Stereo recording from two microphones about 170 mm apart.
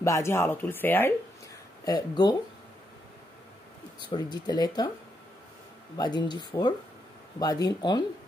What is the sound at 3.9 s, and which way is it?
Speech, 25° left (ahead or behind).